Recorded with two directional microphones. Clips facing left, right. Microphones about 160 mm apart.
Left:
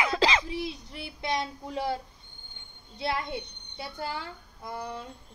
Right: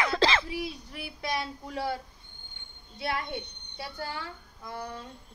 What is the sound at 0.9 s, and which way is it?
Speech, 25° left (ahead or behind).